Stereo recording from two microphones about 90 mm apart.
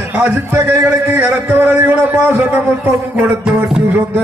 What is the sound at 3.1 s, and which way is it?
Music, 30° right (ahead or behind).